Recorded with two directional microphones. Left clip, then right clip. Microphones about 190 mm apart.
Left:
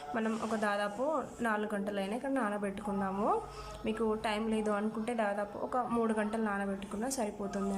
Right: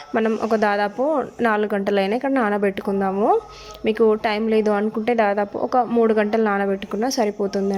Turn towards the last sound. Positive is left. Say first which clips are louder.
# right 15 dB
turn(degrees=-30)  # may be behind; listen again after turning